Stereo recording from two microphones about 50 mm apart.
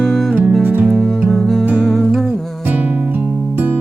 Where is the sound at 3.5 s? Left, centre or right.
Right.